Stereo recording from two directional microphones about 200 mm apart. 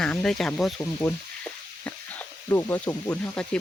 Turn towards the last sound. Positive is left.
turn(degrees=5)  # may be behind; listen again after turning